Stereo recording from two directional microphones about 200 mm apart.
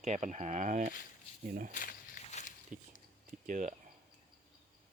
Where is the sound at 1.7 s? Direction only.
40° left (ahead or behind).